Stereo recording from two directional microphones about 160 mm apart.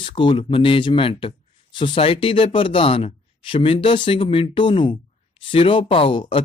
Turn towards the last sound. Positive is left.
turn(degrees=35)  # may be behind; listen again after turning